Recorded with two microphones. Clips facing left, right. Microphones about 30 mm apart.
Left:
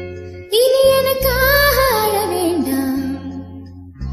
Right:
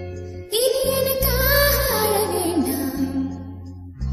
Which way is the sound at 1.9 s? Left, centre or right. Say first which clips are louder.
Left 4 dB; centre.